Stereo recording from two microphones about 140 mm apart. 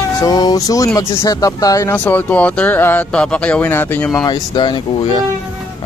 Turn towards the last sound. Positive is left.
turn(degrees=35)  # may be behind; listen again after turning